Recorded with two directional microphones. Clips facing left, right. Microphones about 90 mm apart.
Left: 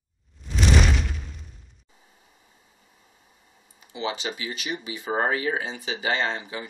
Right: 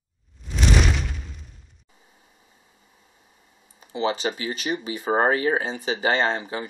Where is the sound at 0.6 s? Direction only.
Centre (ahead or behind).